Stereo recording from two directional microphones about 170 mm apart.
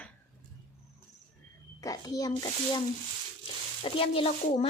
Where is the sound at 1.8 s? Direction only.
20° left (ahead or behind).